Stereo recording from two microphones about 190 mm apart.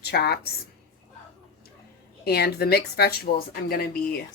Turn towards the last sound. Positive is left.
turn(degrees=50)  # may be behind; listen again after turning